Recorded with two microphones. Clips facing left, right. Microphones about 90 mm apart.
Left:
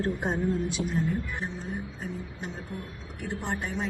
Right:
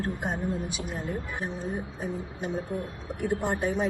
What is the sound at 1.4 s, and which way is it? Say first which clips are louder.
Speech: right 2 dB; 15° right (ahead or behind).